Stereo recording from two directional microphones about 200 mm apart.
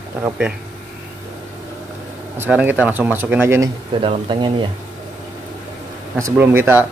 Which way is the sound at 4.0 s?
25° right (ahead or behind).